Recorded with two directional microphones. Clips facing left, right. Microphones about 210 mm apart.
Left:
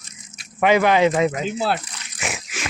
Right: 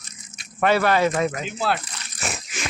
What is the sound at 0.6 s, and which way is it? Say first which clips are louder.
Speech: left 3 dB; 15° left (ahead or behind).